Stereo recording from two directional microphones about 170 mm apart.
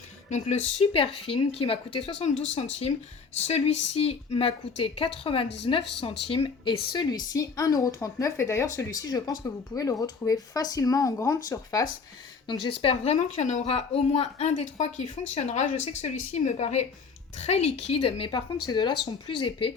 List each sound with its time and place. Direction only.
0.3 s speech: 45° left (ahead or behind)
3.4 s speech: 35° left (ahead or behind)